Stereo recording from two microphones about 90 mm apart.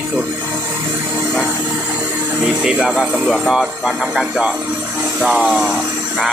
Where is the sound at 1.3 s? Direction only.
20° right (ahead or behind).